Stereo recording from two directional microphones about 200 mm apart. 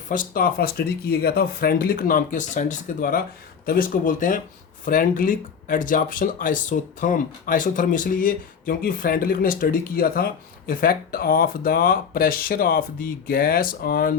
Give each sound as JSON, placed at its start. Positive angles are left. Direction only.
{"t": 0.1, "sound": "speech", "side_deg": 45}